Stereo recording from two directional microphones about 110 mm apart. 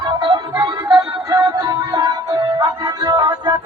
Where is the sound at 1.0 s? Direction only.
30° right (ahead or behind).